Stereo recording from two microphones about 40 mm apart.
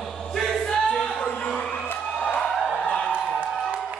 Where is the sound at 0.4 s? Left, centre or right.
Centre.